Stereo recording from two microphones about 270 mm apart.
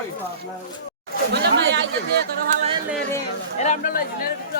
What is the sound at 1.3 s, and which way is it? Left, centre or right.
Chatter, right.